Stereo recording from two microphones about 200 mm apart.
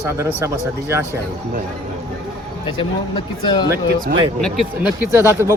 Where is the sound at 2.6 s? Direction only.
25° left (ahead or behind).